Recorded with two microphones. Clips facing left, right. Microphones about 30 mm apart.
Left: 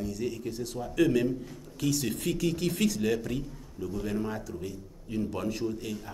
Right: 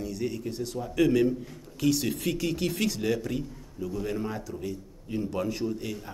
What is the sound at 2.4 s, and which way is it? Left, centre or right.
Speech, right.